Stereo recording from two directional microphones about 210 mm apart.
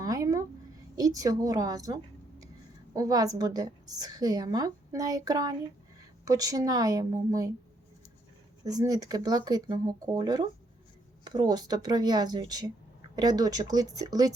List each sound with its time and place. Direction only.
0.0 s a sound: 15° right (ahead or behind)
0.9 s a woman's voice: 15° right (ahead or behind)
8.6 s a woman's voice: 15° right (ahead or behind)